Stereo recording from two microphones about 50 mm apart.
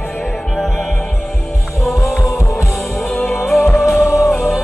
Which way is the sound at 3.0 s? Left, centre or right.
Centre.